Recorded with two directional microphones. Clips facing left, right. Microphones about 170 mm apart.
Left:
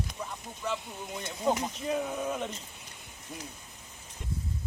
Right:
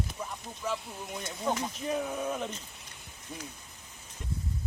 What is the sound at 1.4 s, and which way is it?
Speech, 15° left (ahead or behind).